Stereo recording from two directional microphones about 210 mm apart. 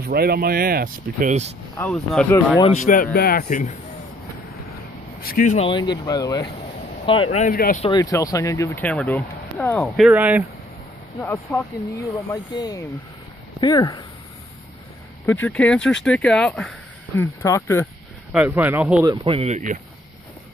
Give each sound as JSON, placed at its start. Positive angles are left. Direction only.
{"t": 0.0, "sound": "speech", "side_deg": -45}
{"t": 1.8, "sound": "speech", "side_deg": 5}
{"t": 2.8, "sound": "speech", "side_deg": 40}
{"t": 5.2, "sound": "speech", "side_deg": 40}
{"t": 5.7, "sound": "speech", "side_deg": 20}
{"t": 7.8, "sound": "speech", "side_deg": 20}
{"t": 11.1, "sound": "speech", "side_deg": 15}
{"t": 15.4, "sound": "speech", "side_deg": 5}
{"t": 18.3, "sound": "speech", "side_deg": -10}
{"t": 19.0, "sound": "speech", "side_deg": -25}